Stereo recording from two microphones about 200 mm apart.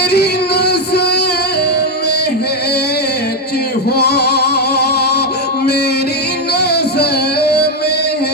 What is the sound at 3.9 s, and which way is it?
Music, 55° left (ahead or behind).